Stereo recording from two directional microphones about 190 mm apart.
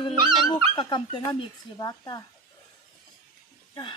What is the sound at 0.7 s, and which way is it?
Speech, 25° left (ahead or behind).